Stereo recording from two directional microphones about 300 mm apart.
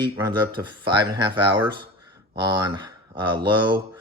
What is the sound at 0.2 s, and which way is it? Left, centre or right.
Speech, centre.